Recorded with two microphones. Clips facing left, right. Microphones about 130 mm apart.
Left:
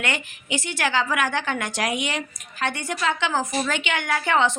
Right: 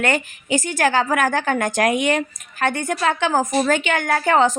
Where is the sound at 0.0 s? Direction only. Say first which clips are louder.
Right 7 dB; 45° right (ahead or behind).